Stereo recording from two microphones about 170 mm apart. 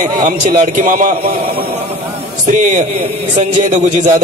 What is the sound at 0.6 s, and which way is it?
Speech, 50° right (ahead or behind).